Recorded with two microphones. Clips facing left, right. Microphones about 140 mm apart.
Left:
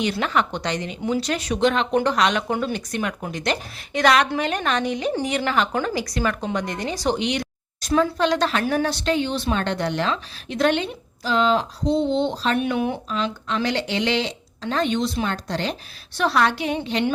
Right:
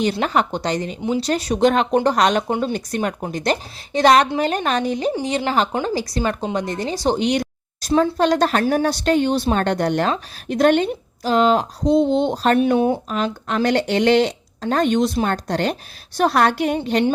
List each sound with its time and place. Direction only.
0.0 s a woman's voice: 35° right (ahead or behind)
2.5 s speech: 25° right (ahead or behind)
2.7 s a woman's voice: 40° right (ahead or behind)
7.2 s a woman's voice: 40° right (ahead or behind)
12.5 s a woman's voice: 35° right (ahead or behind)
13.1 s a woman's voice: 50° right (ahead or behind)